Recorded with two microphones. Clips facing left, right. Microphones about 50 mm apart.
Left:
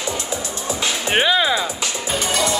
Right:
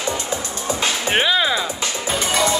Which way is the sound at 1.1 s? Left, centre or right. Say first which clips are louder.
Left 1 dB; centre.